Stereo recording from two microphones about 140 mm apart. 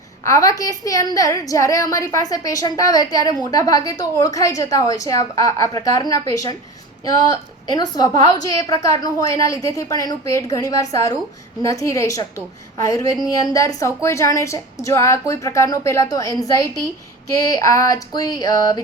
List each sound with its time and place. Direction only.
0.3 s a woman's voice: 25° left (ahead or behind)
7.7 s a woman's voice: 30° left (ahead or behind)